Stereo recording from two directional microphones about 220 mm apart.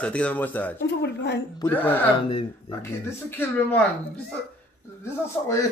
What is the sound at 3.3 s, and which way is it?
Speech, 10° left (ahead or behind).